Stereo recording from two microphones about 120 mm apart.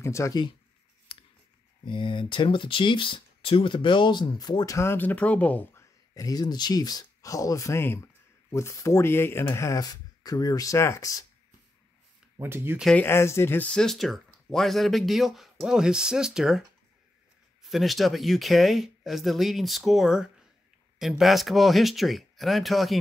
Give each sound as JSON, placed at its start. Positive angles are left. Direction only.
{"t": 0.0, "sound": "speech", "side_deg": 25}
{"t": 1.9, "sound": "speech", "side_deg": 45}
{"t": 4.7, "sound": "speech", "side_deg": 20}
{"t": 12.4, "sound": "speech", "side_deg": -20}
{"t": 12.9, "sound": "speech", "side_deg": 20}
{"t": 17.6, "sound": "speech", "side_deg": 0}